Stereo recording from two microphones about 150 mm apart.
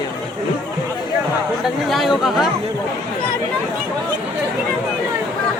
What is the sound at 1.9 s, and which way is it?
Speech, centre (ahead or behind).